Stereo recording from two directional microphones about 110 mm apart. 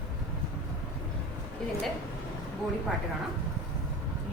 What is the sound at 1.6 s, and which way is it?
Speech, 5° left (ahead or behind).